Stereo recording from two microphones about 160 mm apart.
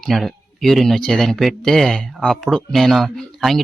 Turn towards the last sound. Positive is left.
turn(degrees=0)  # may be behind; listen again after turning